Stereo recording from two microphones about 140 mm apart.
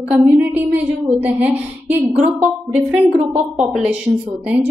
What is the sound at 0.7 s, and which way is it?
A woman's voice, 10° right (ahead or behind).